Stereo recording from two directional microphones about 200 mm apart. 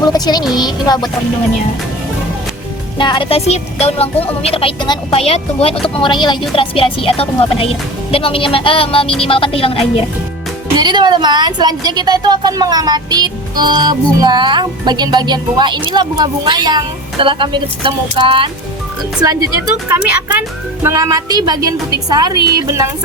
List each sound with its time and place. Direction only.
0.0 s speech: 20° left (ahead or behind)
3.0 s speech: 25° left (ahead or behind)
10.8 s speech: 20° right (ahead or behind)
20.8 s speech: 15° right (ahead or behind)